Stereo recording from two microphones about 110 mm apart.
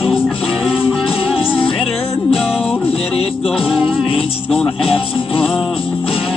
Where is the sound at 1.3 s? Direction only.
60° left (ahead or behind).